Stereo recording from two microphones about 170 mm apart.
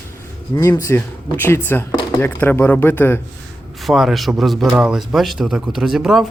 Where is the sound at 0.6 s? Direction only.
20° left (ahead or behind).